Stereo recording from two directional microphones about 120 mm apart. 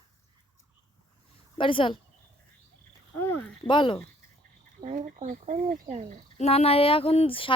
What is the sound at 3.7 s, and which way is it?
Speech, 40° left (ahead or behind).